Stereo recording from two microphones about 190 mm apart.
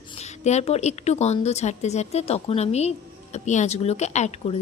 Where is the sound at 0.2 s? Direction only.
35° left (ahead or behind).